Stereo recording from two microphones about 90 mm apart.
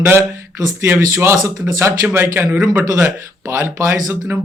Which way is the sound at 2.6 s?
15° right (ahead or behind).